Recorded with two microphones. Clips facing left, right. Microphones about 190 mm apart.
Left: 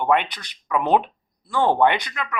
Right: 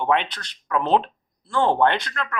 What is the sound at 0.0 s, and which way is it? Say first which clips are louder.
Speech: left 1 dB; 5° left (ahead or behind).